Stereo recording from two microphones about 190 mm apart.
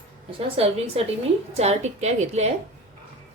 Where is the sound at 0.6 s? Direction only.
30° right (ahead or behind).